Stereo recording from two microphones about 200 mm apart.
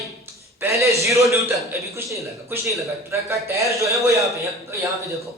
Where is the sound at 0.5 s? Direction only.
15° right (ahead or behind).